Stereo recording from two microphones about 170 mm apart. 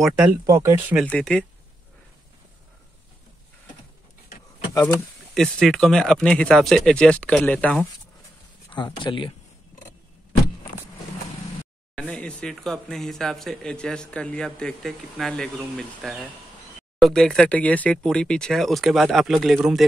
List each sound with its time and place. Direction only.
0.0 s speech: 5° right (ahead or behind)
0.5 s speech: 20° right (ahead or behind)
1.0 s speech: 5° left (ahead or behind)
4.8 s speech: 5° left (ahead or behind)
8.7 s speech: 30° left (ahead or behind)
11.9 s speech: 5° left (ahead or behind)